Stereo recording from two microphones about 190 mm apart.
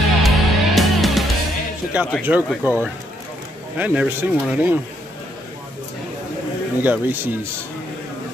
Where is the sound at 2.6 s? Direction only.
10° right (ahead or behind).